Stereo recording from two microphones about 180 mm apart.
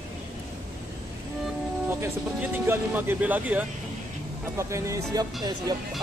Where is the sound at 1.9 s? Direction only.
10° right (ahead or behind).